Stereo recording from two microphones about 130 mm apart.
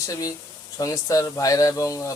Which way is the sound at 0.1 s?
30° left (ahead or behind).